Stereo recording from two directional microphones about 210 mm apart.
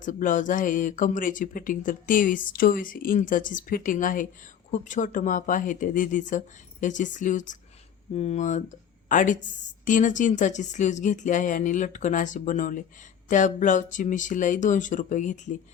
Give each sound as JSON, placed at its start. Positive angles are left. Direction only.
{"t": 0.0, "sound": "a woman's voice", "side_deg": 40}